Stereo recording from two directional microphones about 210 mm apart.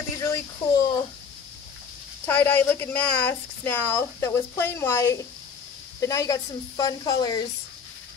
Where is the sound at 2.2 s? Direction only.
10° left (ahead or behind).